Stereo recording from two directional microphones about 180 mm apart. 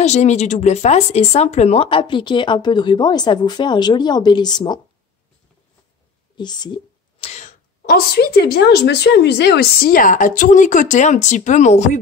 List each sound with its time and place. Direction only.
0.0 s speech: 40° left (ahead or behind); by 4.7 s 20° left (ahead or behind)
6.3 s speech: 25° left (ahead or behind); by 12.0 s 40° left (ahead or behind)